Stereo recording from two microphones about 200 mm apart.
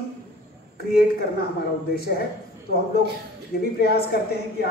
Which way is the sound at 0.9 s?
50° left (ahead or behind).